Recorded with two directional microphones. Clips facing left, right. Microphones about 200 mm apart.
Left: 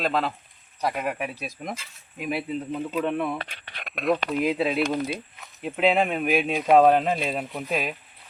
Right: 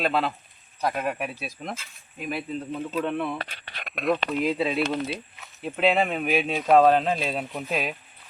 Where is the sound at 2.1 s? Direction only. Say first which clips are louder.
Left 2 dB; 10° left (ahead or behind).